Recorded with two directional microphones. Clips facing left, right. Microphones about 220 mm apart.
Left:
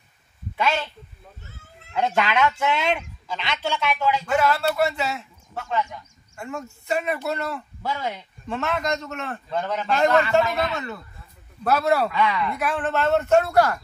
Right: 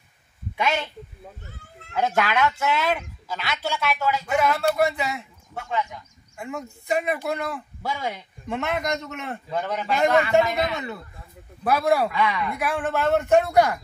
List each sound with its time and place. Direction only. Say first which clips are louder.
0.6 s a man's voice: left 1 dB; 15° right (ahead or behind)
2.0 s a man's voice: left 1 dB; 10° right (ahead or behind)